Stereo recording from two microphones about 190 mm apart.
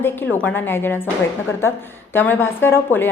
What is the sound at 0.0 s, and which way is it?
A woman's voice, 10° left (ahead or behind).